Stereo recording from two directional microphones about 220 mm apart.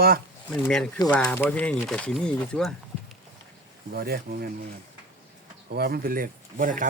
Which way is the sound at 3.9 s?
45° right (ahead or behind).